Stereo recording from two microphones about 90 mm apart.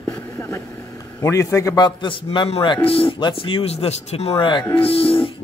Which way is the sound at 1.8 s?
65° left (ahead or behind).